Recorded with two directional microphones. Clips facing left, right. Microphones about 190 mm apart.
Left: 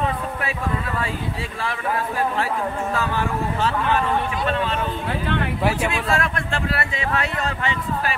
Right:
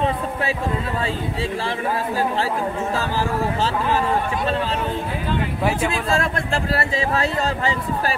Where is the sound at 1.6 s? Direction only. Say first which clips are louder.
Right 2 dB; 30° right (ahead or behind).